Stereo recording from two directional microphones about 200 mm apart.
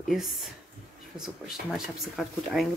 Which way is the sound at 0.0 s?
Centre (ahead or behind).